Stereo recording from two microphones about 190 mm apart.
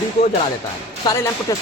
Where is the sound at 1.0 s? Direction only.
15° left (ahead or behind).